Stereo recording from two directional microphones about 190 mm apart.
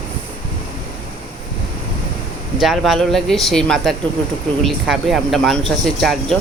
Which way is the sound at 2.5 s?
Centre (ahead or behind).